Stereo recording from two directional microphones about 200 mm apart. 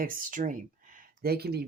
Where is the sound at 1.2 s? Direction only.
50° right (ahead or behind).